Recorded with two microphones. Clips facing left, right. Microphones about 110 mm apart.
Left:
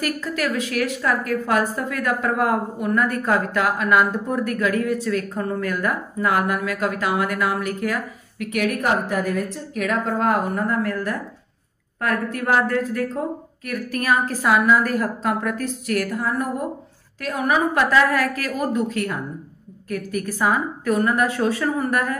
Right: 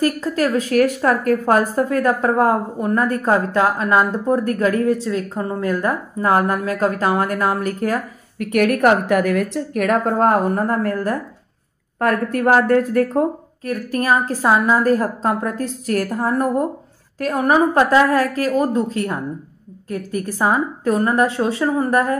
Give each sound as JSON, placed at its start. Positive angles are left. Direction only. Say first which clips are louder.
{"t": 0.0, "sound": "a woman's voice", "louder": "right 6 dB", "side_deg": -35}
{"t": 13.7, "sound": "a woman's voice", "louder": "right 3 dB", "side_deg": -30}